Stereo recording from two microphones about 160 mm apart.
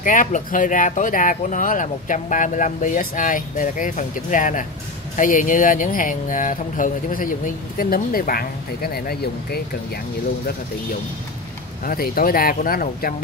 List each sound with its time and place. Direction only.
0.0 s speech: 55° left (ahead or behind); by 9.6 s 80° left
11.8 s speech: 65° left (ahead or behind)